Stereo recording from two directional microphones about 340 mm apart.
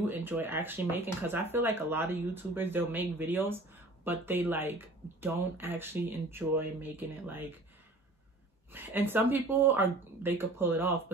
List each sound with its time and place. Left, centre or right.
0.0 s speech: centre
8.7 s speech: centre